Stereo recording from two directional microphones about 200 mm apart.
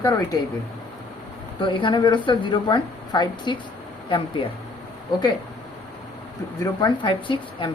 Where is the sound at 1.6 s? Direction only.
25° left (ahead or behind).